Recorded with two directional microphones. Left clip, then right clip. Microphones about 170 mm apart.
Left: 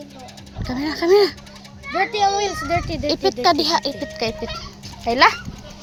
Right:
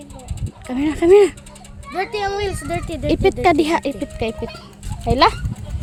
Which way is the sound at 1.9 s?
65° right (ahead or behind).